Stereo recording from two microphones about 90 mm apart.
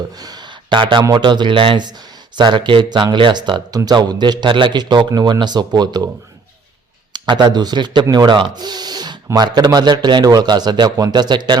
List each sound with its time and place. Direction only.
0.2 s a sound: 45° right (ahead or behind)
0.8 s speech: 65° right (ahead or behind)
3.7 s speech: 45° right (ahead or behind)
7.1 s speech: 55° right (ahead or behind)